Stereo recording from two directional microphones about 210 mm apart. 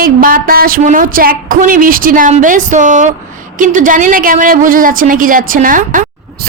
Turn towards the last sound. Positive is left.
turn(degrees=-40)  # may be behind; listen again after turning